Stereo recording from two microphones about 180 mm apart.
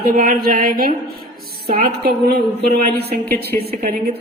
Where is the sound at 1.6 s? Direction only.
30° right (ahead or behind).